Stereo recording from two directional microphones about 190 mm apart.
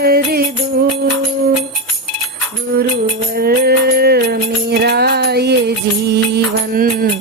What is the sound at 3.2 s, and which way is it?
Music, 55° right (ahead or behind).